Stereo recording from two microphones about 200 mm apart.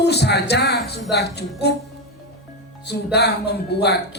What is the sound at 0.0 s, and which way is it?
A man's voice, 55° left (ahead or behind).